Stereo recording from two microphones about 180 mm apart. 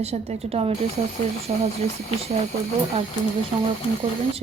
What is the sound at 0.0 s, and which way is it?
Speech, 35° right (ahead or behind).